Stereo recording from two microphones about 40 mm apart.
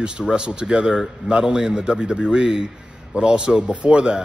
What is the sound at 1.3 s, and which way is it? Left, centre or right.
Speech, right.